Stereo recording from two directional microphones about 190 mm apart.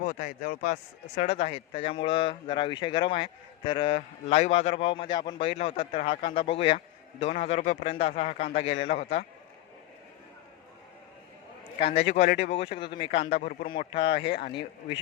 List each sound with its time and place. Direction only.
0.0 s a man's voice: 40° left (ahead or behind)
11.8 s a man's voice: 30° left (ahead or behind)
13.4 s speech: 45° left (ahead or behind)